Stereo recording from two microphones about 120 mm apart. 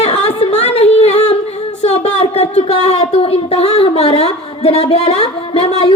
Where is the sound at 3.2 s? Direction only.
55° left (ahead or behind).